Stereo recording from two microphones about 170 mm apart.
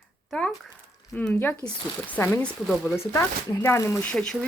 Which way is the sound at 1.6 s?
25° left (ahead or behind).